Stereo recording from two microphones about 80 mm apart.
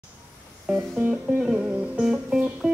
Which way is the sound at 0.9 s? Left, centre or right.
Centre.